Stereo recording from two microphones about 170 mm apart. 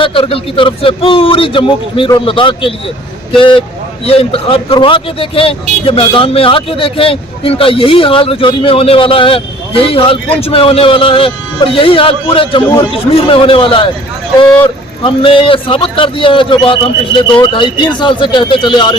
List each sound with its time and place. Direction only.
0.0 s a man's voice: 30° left (ahead or behind)